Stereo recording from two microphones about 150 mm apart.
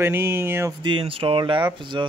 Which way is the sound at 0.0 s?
15° right (ahead or behind).